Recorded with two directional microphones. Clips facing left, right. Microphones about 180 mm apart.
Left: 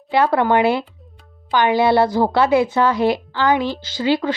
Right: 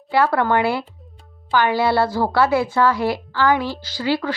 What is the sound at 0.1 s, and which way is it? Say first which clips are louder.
A woman's voice: left 2 dB; 20° left (ahead or behind).